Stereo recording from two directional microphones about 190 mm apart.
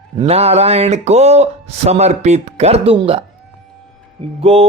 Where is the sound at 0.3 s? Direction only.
35° right (ahead or behind).